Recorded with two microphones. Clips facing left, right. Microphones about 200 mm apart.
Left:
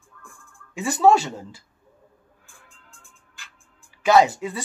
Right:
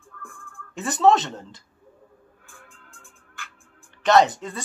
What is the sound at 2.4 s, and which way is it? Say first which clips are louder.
Music: right 4 dB; 55° right (ahead or behind).